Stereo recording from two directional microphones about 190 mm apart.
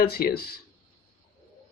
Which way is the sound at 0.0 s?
55° left (ahead or behind).